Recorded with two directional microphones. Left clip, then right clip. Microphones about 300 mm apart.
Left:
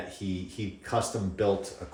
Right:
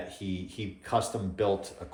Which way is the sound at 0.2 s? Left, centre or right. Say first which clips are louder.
Left 1 dB; centre.